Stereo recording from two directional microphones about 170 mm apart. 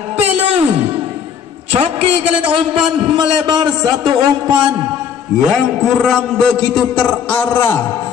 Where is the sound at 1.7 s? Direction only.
35° right (ahead or behind).